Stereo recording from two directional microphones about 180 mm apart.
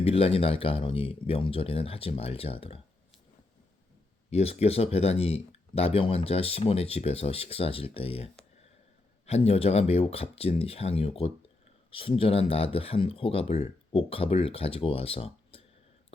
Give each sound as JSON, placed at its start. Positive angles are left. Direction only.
{"t": 0.0, "sound": "speech", "side_deg": 35}
{"t": 4.3, "sound": "speech", "side_deg": 35}